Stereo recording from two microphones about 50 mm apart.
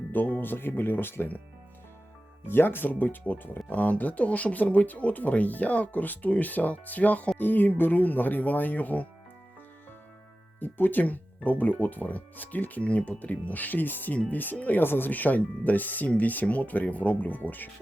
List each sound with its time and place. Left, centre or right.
0.1 s speech: left
2.5 s speech: left
10.6 s speech: left